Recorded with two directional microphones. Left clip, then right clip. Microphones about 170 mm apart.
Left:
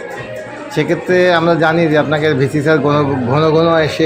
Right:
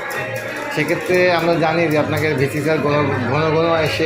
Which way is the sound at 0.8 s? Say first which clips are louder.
Left 4 dB; 60° left (ahead or behind).